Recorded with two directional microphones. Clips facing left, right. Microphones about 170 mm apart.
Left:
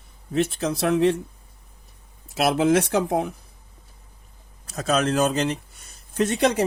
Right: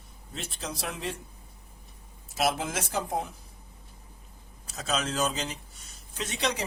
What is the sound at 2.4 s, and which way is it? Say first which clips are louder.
Speech: left 10 dB; 70° left (ahead or behind).